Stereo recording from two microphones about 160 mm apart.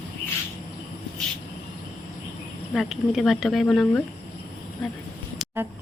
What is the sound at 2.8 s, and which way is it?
Speech, centre (ahead or behind).